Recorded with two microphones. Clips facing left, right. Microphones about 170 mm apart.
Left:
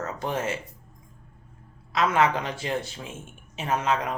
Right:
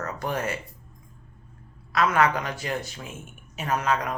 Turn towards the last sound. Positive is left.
turn(degrees=25)  # may be behind; listen again after turning